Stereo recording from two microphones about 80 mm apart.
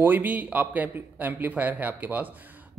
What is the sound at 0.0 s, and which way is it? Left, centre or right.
A man's voice, right.